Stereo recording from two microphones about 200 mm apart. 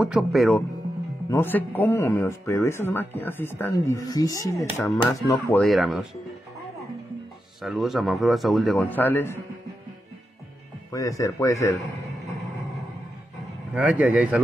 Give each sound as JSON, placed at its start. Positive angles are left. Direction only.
{"t": 0.0, "sound": "a man's voice", "side_deg": 0}
{"t": 1.3, "sound": "speech", "side_deg": 10}
{"t": 5.6, "sound": "a man's voice", "side_deg": 0}
{"t": 7.6, "sound": "a man's voice", "side_deg": 0}
{"t": 10.9, "sound": "speech", "side_deg": 15}
{"t": 13.7, "sound": "speech", "side_deg": -5}